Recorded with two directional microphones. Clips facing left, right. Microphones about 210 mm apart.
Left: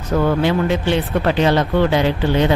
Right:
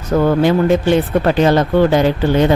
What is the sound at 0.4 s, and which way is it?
Speech, 45° right (ahead or behind).